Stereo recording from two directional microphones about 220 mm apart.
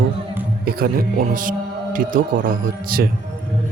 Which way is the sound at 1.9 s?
40° right (ahead or behind).